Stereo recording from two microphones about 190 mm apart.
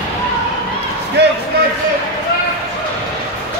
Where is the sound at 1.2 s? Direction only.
65° right (ahead or behind).